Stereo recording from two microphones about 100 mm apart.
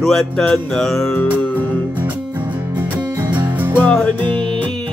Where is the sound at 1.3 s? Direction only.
15° left (ahead or behind).